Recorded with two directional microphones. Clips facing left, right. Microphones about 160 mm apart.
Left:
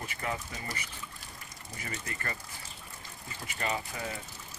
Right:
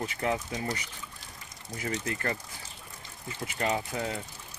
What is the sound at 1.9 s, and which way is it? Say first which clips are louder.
Speech: right 7 dB; 85° right.